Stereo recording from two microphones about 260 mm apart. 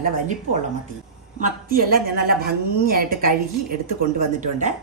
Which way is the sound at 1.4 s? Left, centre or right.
Right.